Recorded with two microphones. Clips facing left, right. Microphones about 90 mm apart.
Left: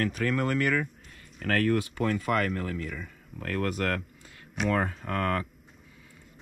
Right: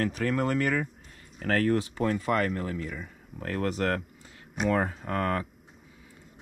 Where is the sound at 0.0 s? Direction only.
35° right (ahead or behind).